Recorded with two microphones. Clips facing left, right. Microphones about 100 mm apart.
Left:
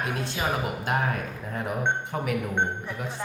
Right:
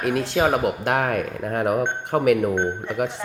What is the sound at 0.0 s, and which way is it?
Speech, 70° right (ahead or behind).